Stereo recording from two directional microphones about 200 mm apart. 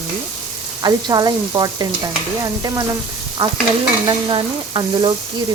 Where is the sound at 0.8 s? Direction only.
20° right (ahead or behind).